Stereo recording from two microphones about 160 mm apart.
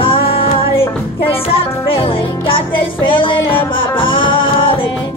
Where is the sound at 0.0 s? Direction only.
35° left (ahead or behind).